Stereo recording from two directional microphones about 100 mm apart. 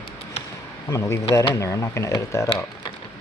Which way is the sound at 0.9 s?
30° left (ahead or behind).